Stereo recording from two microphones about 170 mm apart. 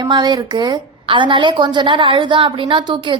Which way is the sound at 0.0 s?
25° right (ahead or behind).